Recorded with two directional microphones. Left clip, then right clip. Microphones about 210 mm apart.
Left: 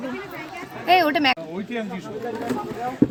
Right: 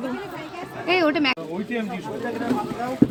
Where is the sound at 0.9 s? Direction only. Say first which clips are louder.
Left 3 dB; 55° left (ahead or behind).